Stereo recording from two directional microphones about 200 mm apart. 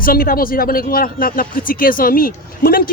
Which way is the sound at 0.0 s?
45° left (ahead or behind).